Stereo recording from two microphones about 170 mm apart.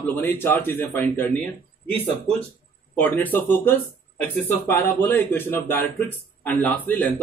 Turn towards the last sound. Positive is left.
turn(degrees=10)  # may be behind; listen again after turning